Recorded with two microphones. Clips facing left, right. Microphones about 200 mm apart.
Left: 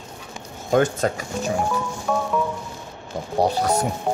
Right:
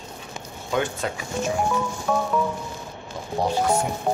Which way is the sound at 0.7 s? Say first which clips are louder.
Left 6 dB; 45° left (ahead or behind).